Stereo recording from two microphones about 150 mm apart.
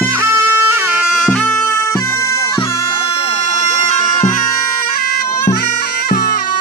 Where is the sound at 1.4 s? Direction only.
10° left (ahead or behind).